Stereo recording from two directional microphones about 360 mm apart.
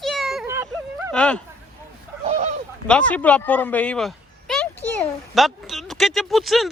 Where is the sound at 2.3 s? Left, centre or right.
Centre.